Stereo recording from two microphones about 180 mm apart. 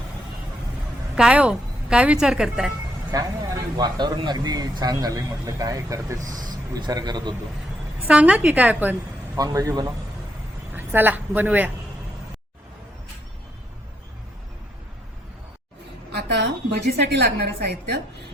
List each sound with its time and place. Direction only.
1.1 s a woman's voice: 5° right (ahead or behind)
3.1 s speech: 20° right (ahead or behind)
6.1 s speech: 45° right (ahead or behind)
6.5 s speech: 20° right (ahead or behind)
8.0 s a woman's voice: 5° right (ahead or behind)
16.7 s a woman's voice: 65° right (ahead or behind)